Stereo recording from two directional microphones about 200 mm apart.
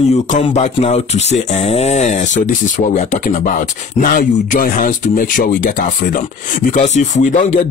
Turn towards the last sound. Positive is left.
turn(degrees=40)  # may be behind; listen again after turning